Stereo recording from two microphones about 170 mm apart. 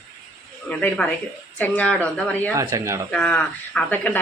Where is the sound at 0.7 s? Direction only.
5° left (ahead or behind).